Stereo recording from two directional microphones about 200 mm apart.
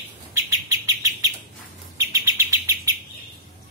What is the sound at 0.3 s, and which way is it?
Bird, 15° right (ahead or behind).